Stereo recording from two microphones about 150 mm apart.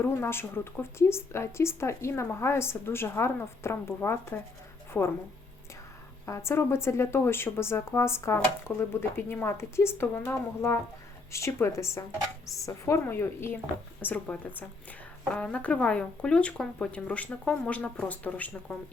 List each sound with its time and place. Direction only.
0.0 s a woman's voice: 15° left (ahead or behind)
6.2 s a woman's voice: 20° left (ahead or behind)